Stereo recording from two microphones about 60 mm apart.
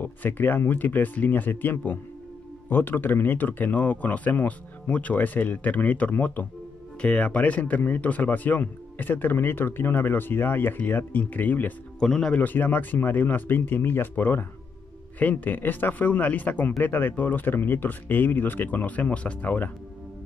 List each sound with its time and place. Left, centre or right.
0.0 s speech: left
12.0 s speech: centre
12.4 s speech: left